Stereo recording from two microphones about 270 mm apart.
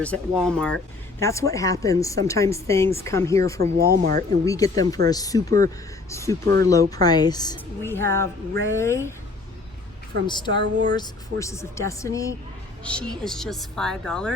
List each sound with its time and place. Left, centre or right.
0.0 s a woman's voice: centre
3.8 s speech: right
4.4 s a woman's voice: centre
10.2 s a woman's voice: centre
10.6 s speech: right
10.9 s a woman's voice: centre